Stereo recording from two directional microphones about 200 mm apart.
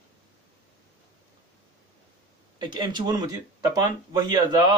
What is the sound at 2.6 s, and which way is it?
Speech, 25° right (ahead or behind).